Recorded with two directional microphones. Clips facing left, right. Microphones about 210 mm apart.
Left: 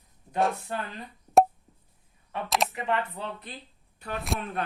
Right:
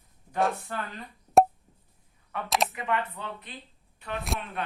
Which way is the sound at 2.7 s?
30° left (ahead or behind).